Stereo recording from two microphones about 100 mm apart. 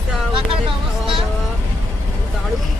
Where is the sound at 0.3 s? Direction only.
60° right (ahead or behind).